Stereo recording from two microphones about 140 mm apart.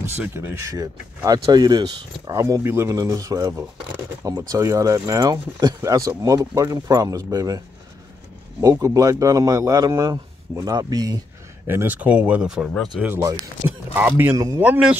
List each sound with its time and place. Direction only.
0.0 s speech: 15° right (ahead or behind)
11.6 s speech: 15° right (ahead or behind)
13.2 s speech: 25° right (ahead or behind)
14.6 s speech: 10° right (ahead or behind)